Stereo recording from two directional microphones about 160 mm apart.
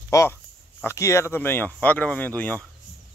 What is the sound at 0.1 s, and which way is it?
Speech, 20° left (ahead or behind).